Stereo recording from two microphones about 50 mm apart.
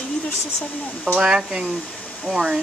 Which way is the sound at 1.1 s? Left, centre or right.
Centre.